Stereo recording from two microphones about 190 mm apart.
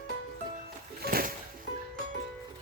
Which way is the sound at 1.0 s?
50° right (ahead or behind).